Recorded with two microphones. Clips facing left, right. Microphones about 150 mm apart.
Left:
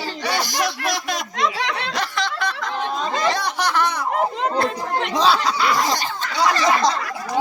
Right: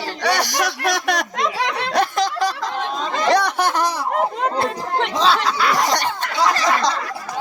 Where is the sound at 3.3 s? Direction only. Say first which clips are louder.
Right 3 dB; 60° right (ahead or behind); by 3.9 s 40° right (ahead or behind).